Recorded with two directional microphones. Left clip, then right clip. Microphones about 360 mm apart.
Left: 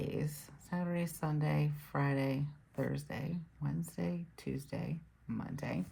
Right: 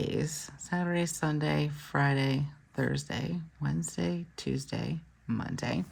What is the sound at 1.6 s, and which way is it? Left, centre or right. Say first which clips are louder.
Speech: right 7 dB; right.